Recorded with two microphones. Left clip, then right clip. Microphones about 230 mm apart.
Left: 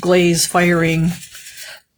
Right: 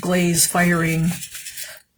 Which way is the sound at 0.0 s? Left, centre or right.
Left.